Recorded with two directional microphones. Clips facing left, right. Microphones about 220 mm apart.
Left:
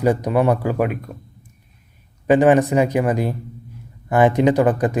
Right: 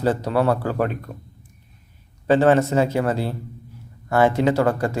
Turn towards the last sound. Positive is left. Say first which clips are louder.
# left 3 dB
turn(degrees=15)  # may be behind; listen again after turning